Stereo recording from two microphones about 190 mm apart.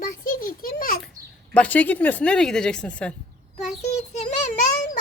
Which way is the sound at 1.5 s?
10° left (ahead or behind).